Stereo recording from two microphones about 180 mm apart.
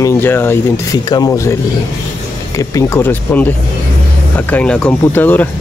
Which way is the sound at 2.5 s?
15° left (ahead or behind).